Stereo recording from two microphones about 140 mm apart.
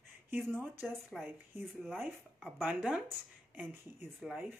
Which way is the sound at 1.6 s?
5° left (ahead or behind).